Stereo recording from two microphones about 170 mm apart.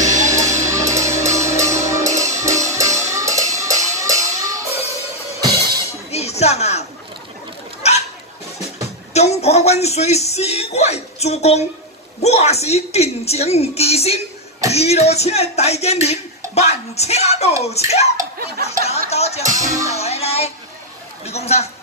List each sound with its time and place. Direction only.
0.0 s music: 45° right (ahead or behind)
0.3 s music: 15° right (ahead or behind)
6.1 s music: 40° left (ahead or behind)
7.8 s hiccup: 40° left (ahead or behind)
8.8 s music: 40° left (ahead or behind)
12.2 s speech: 40° left (ahead or behind)
19.9 s music: 40° left (ahead or behind)
21.3 s speech: 40° left (ahead or behind)